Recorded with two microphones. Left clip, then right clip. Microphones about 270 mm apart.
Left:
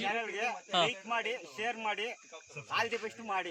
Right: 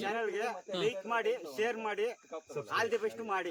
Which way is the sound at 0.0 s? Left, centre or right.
Centre.